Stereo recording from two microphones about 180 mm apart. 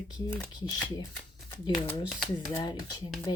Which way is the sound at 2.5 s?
25° left (ahead or behind).